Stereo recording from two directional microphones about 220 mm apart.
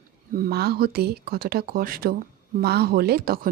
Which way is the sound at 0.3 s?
45° right (ahead or behind).